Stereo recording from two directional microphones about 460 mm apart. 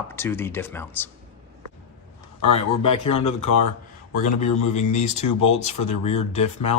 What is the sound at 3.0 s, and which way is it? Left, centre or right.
Speech, left.